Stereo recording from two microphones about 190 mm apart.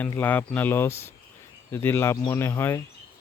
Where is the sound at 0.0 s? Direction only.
10° left (ahead or behind).